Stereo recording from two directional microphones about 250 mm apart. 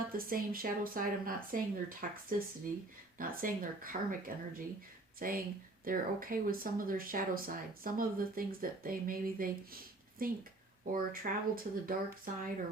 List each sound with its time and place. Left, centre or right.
0.1 s speech: right
3.2 s speech: right